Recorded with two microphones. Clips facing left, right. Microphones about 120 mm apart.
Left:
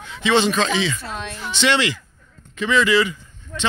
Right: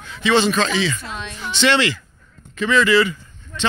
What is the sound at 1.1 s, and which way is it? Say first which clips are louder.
Speech: left 1 dB; 45° left (ahead or behind).